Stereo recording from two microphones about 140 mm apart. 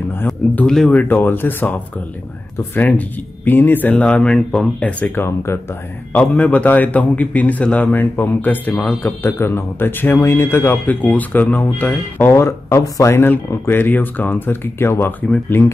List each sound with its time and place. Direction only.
0.1 s speech: 15° left (ahead or behind)
0.7 s a man's voice: 5° left (ahead or behind)